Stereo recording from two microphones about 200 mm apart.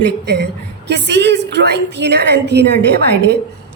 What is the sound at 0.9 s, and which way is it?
A woman's voice, 60° right (ahead or behind).